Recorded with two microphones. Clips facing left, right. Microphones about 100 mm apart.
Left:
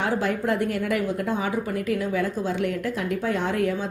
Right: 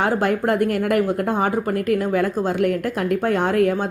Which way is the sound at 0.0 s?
55° right (ahead or behind).